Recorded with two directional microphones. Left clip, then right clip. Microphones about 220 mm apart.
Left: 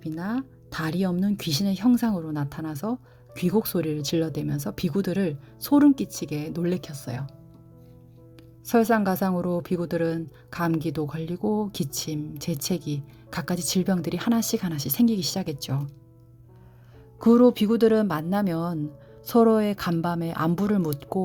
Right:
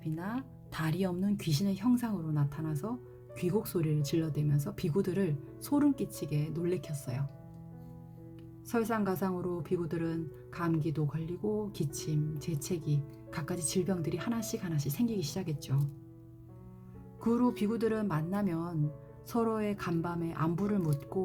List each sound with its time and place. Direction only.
0.0 s speech: 30° left (ahead or behind)
8.6 s speech: 50° left (ahead or behind)
17.2 s speech: 45° left (ahead or behind)